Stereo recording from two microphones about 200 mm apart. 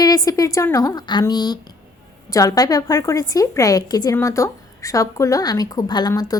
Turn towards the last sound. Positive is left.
turn(degrees=20)  # may be behind; listen again after turning